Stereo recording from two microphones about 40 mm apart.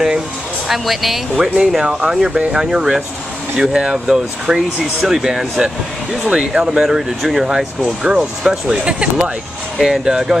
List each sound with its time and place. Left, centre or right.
0.7 s speech: centre; by 9.3 s right
9.8 s speech: centre